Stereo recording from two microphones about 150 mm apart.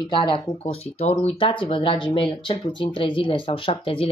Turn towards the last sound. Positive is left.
turn(degrees=35)  # may be behind; listen again after turning